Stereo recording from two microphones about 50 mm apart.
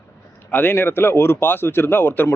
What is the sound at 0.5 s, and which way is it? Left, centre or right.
Speech, left.